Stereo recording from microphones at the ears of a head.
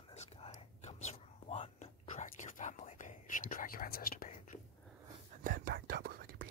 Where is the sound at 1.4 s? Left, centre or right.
Left.